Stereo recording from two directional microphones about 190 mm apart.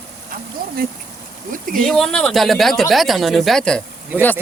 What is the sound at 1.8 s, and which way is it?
A man's voice, centre (ahead or behind).